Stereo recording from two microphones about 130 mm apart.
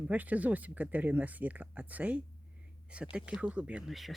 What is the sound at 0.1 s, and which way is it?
Speech, 10° right (ahead or behind).